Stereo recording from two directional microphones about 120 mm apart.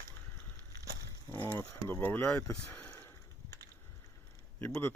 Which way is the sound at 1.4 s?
20° left (ahead or behind).